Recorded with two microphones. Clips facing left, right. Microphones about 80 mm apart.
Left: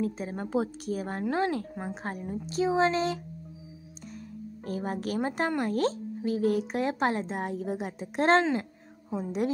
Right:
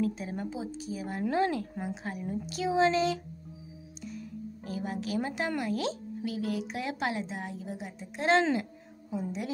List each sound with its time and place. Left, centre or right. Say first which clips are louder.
0.0 s speech: even; left
0.5 s speech: left 7 dB; left
1.3 s speech: even; left
2.2 s speech: left 4 dB; left
4.6 s speech: left 3 dB; left